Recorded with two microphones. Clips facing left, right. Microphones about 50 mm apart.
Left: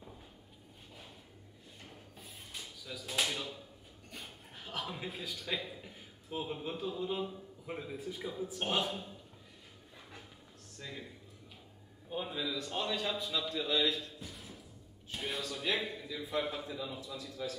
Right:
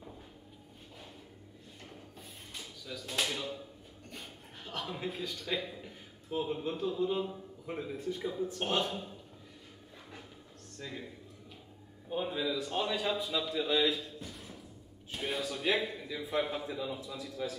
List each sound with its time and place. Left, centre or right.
1.8 s a sound: centre
7.6 s a man's voice: centre
10.8 s a man's voice: centre
12.1 s a man's voice: centre